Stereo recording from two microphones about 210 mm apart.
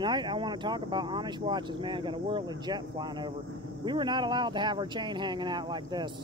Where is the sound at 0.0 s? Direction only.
20° right (ahead or behind).